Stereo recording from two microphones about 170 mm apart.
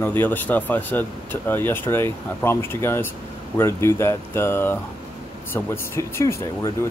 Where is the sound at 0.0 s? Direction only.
10° left (ahead or behind).